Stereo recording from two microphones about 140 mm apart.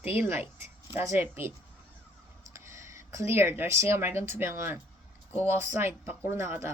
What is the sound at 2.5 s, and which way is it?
Speech, 20° right (ahead or behind).